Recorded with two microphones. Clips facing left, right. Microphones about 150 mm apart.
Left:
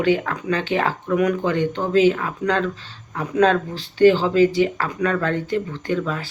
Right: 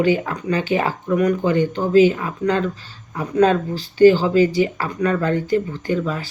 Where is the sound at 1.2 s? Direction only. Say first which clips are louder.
Right 2 dB; 10° left (ahead or behind).